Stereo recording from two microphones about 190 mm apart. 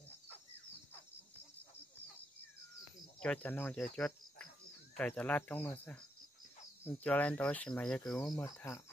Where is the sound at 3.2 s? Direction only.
5° left (ahead or behind).